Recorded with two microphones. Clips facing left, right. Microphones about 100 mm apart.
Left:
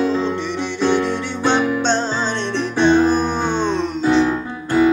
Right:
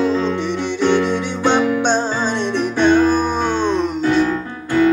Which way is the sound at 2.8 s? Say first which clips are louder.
Even; 20° left (ahead or behind).